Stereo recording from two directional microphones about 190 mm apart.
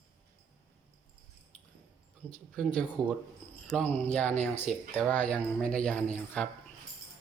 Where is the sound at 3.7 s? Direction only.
5° left (ahead or behind).